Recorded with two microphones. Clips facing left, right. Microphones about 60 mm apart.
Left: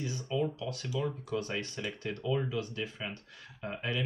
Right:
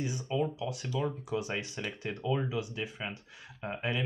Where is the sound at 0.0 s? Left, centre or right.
Centre.